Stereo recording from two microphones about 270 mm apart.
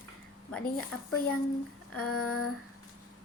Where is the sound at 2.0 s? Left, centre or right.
Left.